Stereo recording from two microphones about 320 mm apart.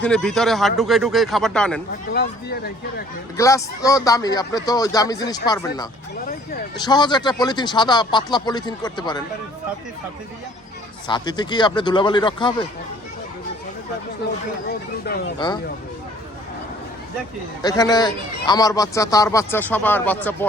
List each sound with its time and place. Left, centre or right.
0.0 s speech: centre
2.1 s speech: left
3.3 s speech: centre
11.1 s speech: centre
15.4 s speech: centre
17.6 s speech: centre